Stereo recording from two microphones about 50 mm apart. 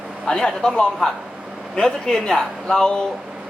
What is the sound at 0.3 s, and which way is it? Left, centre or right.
Speech, centre.